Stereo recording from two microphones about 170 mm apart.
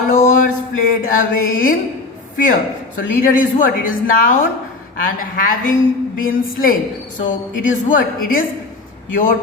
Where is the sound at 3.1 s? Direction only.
50° left (ahead or behind).